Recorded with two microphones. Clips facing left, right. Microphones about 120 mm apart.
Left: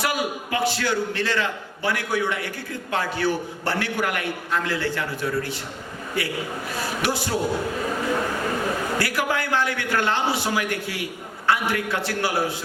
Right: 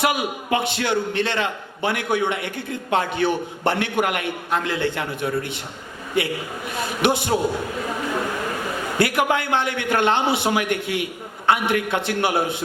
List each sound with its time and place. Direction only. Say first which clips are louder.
0.0 s a man's voice: right 3 dB; 20° right (ahead or behind)
9.0 s a man's voice: right 4 dB; 20° right (ahead or behind)